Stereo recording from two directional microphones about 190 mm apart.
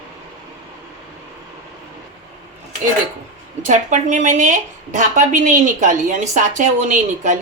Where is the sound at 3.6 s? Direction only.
40° right (ahead or behind).